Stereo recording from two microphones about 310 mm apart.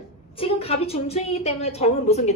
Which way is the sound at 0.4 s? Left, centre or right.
Centre.